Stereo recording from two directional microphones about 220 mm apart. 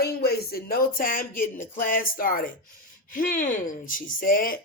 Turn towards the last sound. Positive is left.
turn(degrees=40)  # may be behind; listen again after turning